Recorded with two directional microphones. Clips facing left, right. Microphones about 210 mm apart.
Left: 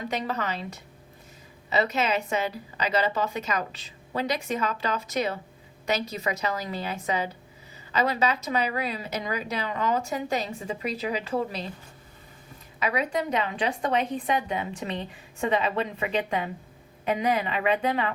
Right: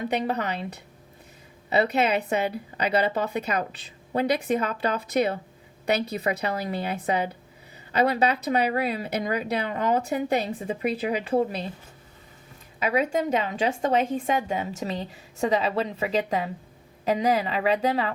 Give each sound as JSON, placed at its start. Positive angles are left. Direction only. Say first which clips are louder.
{"t": 0.1, "sound": "speech", "louder": "right 3 dB", "side_deg": -60}
{"t": 12.8, "sound": "a woman's voice", "louder": "right 3 dB", "side_deg": -30}
{"t": 13.9, "sound": "a woman's voice", "louder": "right 2 dB", "side_deg": -45}